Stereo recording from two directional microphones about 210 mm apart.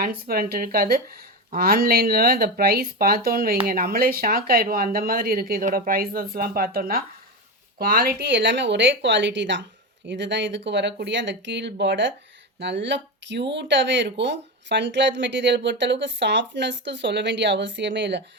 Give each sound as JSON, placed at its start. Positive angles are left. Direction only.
{"t": 0.0, "sound": "speech", "side_deg": -45}